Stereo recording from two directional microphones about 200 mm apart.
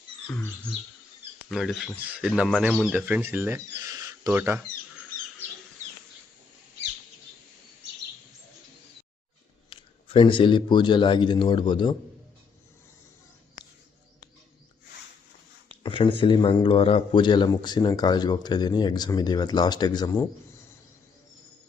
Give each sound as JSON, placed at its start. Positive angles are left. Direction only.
{"t": 1.5, "sound": "speech", "side_deg": 0}
{"t": 9.6, "sound": "a man's voice", "side_deg": 25}
{"t": 15.8, "sound": "speech", "side_deg": 25}